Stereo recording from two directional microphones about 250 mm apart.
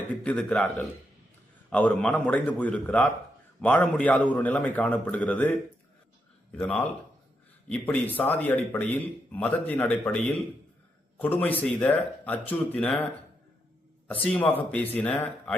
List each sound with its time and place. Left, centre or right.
0.2 s a man's voice: centre
6.6 s a man's voice: centre
14.1 s a man's voice: centre